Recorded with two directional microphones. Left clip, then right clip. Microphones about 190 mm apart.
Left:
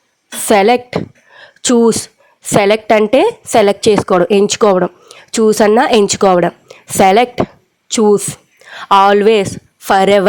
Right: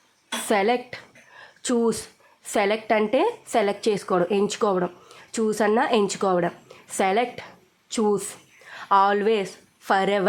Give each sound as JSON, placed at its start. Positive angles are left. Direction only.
{"t": 0.4, "sound": "a woman's voice", "side_deg": 45}